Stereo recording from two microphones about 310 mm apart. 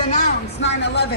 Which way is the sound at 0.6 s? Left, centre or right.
Left.